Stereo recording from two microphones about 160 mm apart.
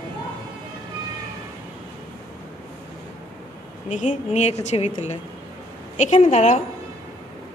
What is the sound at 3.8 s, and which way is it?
A woman's voice, 50° left (ahead or behind).